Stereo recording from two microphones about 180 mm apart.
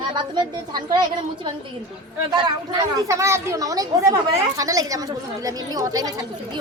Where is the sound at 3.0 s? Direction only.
15° right (ahead or behind).